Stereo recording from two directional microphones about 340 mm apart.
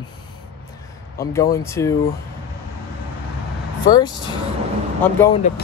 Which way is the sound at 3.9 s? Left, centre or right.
Centre.